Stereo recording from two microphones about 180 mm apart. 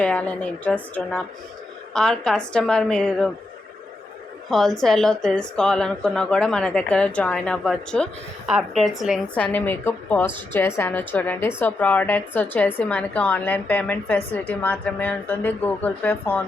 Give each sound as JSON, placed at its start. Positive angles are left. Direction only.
{"t": 0.0, "sound": "a woman's voice", "side_deg": 5}
{"t": 4.4, "sound": "a woman's voice", "side_deg": 0}